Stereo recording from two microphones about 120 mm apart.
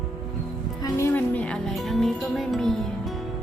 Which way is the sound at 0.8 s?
25° left (ahead or behind).